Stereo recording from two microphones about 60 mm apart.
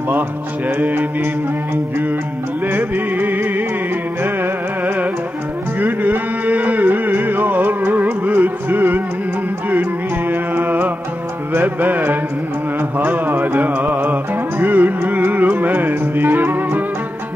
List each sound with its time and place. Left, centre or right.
0.7 s music: right
2.7 s music: right
10.3 s music: right